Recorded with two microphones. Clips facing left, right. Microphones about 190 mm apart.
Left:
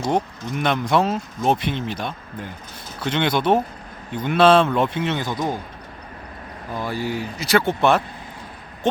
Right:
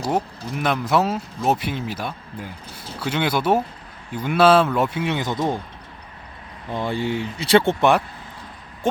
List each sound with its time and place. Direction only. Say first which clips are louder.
0.0 s a man's voice: left 1 dB; 5° right (ahead or behind); by 5.5 s 25° right (ahead or behind)
6.7 s speech: right 2 dB; 25° right (ahead or behind)